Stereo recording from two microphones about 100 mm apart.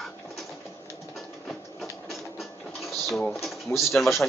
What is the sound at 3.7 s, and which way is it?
Speech, 25° left (ahead or behind).